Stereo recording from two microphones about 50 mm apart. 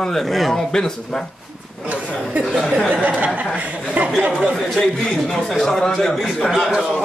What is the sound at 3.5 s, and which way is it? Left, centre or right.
Chuckle, right.